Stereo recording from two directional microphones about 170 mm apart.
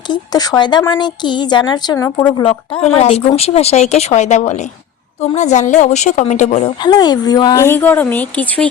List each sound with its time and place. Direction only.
0.1 s speech: 25° left (ahead or behind)
2.4 s a woman's voice: 35° left (ahead or behind)
6.8 s speech: 25° left (ahead or behind); by 8.7 s 5° left (ahead or behind)